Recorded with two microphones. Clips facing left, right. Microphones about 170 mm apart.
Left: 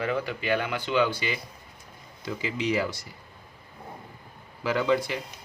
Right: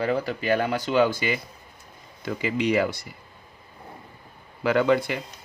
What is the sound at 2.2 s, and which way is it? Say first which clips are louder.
Speech: right 4 dB; 60° right (ahead or behind).